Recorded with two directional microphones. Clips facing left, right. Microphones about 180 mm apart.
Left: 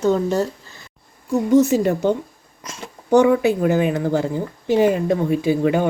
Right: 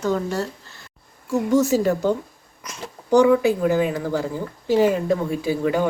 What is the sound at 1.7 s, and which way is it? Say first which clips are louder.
Speech: left 1 dB; 20° left (ahead or behind).